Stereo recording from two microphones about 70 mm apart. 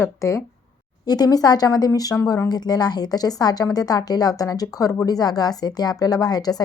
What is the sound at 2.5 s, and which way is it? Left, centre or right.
A woman's voice, left.